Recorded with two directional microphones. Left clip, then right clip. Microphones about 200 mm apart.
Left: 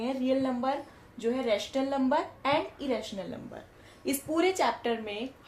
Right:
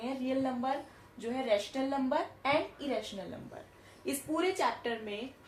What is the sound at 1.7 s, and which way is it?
A woman's voice, 40° left (ahead or behind).